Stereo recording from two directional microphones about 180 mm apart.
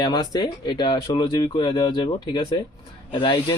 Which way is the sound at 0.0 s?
20° left (ahead or behind).